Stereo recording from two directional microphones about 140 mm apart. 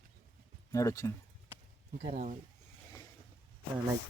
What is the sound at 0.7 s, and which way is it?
Speech, 25° left (ahead or behind).